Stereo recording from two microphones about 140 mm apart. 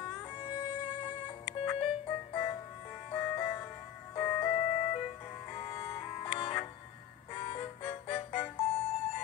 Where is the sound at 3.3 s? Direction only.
25° left (ahead or behind).